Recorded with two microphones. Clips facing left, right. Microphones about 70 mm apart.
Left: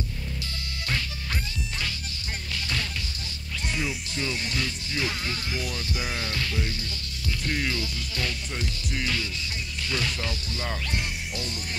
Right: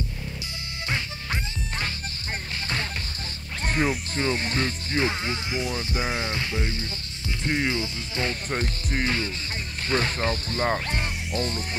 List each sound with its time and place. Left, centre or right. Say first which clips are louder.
0.8 s music: right 2 dB; right
2.5 s music: right 1 dB; right
3.6 s speech: right 6 dB; right
8.5 s speech: right 4 dB; right